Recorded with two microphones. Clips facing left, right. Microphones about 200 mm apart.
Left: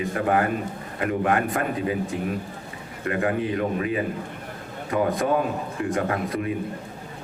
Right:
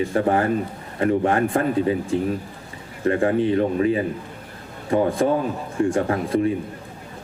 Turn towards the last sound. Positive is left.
turn(degrees=-30)  # may be behind; listen again after turning